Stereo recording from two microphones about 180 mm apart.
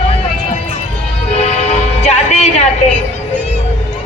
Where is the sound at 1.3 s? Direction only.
35° left (ahead or behind).